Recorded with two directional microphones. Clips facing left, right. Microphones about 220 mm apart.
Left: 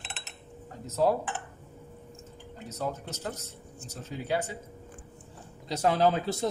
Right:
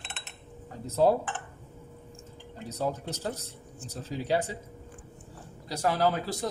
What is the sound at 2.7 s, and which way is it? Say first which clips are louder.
Speech: right 3 dB; 35° right (ahead or behind).